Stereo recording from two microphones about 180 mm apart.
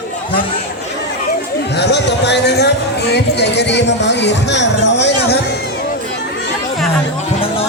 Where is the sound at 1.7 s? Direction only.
70° left (ahead or behind).